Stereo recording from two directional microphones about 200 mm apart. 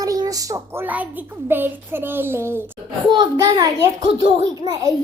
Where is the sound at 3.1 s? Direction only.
20° right (ahead or behind).